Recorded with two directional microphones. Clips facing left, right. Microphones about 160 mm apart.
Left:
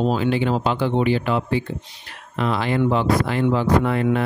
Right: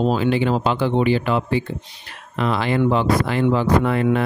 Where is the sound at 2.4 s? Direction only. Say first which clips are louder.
Right 1 dB; 90° right.